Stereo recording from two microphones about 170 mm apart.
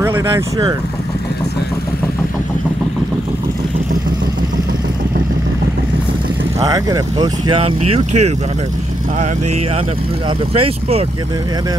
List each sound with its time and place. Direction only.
0.0 s speech: 15° right (ahead or behind)
6.6 s speech: 20° right (ahead or behind); by 8.3 s 40° right (ahead or behind)
10.5 s speech: 35° right (ahead or behind)